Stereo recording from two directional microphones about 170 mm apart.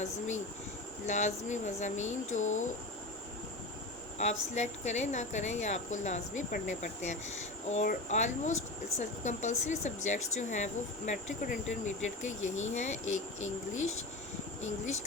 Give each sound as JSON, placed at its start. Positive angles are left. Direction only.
{"t": 1.0, "sound": "speech", "side_deg": 45}
{"t": 4.2, "sound": "speech", "side_deg": 40}